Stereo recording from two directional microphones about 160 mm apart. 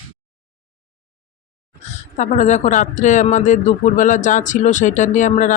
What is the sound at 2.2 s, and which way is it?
Speech, 45° left (ahead or behind).